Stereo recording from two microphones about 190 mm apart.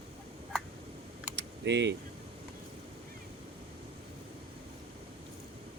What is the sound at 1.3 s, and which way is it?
Keys jangling, 65° right (ahead or behind).